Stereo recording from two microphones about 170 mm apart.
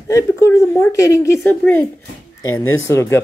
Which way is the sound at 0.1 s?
15° left (ahead or behind).